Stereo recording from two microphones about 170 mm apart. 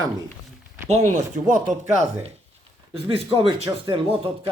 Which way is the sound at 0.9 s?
40° right (ahead or behind).